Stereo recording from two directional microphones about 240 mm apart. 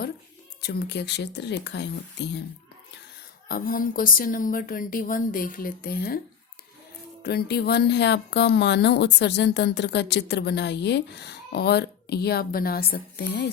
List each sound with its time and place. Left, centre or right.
0.6 s speech: left
3.5 s a woman's voice: left
7.2 s speech: left